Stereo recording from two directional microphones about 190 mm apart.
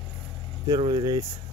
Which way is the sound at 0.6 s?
20° right (ahead or behind).